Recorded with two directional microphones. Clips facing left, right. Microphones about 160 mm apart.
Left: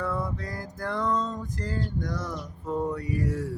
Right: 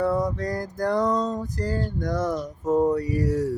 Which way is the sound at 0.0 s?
40° right (ahead or behind).